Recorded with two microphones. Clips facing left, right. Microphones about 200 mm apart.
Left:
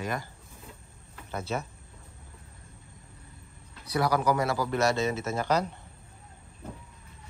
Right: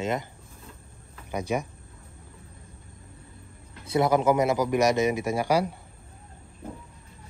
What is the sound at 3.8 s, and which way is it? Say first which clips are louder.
Speech: right 4 dB; 25° right (ahead or behind).